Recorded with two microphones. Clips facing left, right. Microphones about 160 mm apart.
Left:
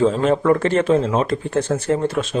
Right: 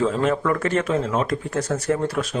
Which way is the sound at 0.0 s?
30° left (ahead or behind).